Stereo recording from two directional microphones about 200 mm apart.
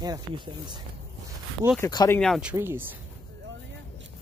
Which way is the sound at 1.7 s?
15° left (ahead or behind).